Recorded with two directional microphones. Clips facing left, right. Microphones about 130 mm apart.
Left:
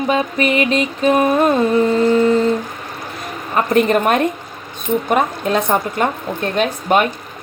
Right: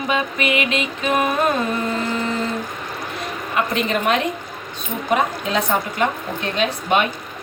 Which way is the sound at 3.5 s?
45° left (ahead or behind).